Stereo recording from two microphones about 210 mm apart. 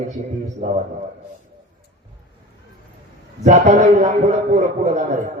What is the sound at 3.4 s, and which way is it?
A man's voice, 35° right (ahead or behind).